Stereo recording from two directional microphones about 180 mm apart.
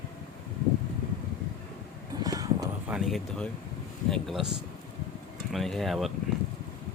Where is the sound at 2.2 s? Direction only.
20° right (ahead or behind).